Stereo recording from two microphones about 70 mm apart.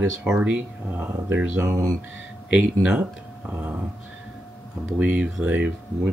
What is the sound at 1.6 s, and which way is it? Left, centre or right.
Speech, right.